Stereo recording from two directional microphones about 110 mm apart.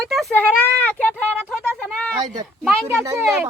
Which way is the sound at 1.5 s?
5° right (ahead or behind).